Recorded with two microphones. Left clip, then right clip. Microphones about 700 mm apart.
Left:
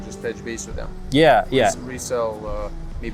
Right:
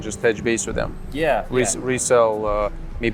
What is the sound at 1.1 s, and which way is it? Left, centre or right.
Speech, left.